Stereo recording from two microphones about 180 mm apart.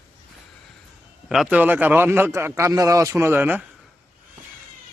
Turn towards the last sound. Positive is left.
turn(degrees=-10)  # may be behind; listen again after turning